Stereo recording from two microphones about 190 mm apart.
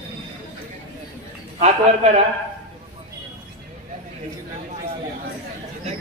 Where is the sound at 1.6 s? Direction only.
35° right (ahead or behind).